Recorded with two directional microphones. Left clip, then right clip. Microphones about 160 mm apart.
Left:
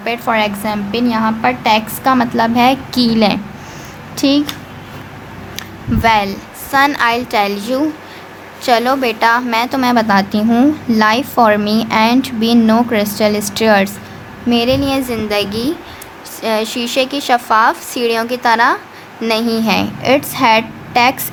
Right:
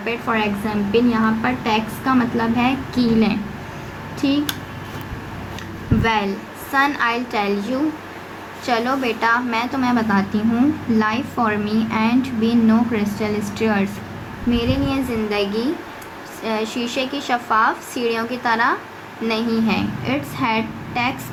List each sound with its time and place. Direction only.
0.0 s a woman's voice: 60° left (ahead or behind)
5.5 s a woman's voice: 50° left (ahead or behind)